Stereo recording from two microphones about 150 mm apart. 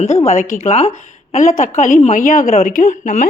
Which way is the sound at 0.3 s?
60° left (ahead or behind).